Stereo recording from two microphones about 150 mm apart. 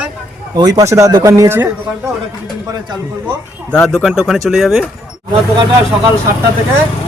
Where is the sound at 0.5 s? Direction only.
25° right (ahead or behind).